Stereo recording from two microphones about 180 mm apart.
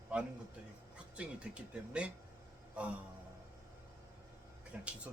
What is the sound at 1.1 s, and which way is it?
Speech, 5° right (ahead or behind).